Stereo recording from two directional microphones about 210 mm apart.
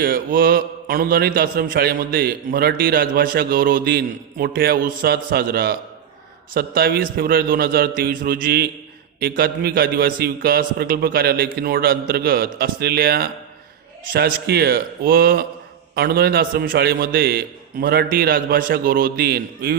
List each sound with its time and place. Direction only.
0.0 s a man's voice: 45° right (ahead or behind)